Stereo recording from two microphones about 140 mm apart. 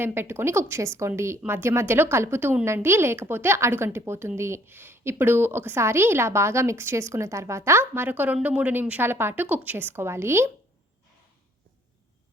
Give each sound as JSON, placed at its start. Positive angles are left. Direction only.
{"t": 0.0, "sound": "a woman's voice", "side_deg": -15}